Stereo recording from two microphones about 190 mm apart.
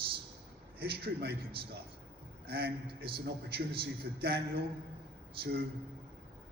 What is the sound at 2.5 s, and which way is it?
A man's voice, 55° right (ahead or behind).